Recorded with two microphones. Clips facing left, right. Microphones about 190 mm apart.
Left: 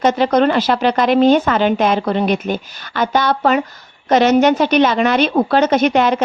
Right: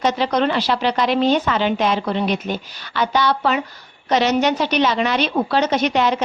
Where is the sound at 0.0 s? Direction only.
50° left (ahead or behind).